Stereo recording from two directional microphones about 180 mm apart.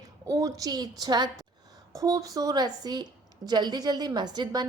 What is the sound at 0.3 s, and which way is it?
A woman's voice, 20° right (ahead or behind).